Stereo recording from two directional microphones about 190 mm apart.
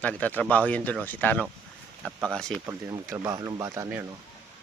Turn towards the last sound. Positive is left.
turn(degrees=-15)  # may be behind; listen again after turning